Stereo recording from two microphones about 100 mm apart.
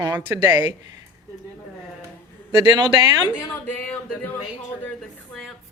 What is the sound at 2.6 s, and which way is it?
Speech, 45° right (ahead or behind).